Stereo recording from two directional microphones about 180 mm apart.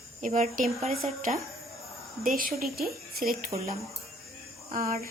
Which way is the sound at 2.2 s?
50° right (ahead or behind).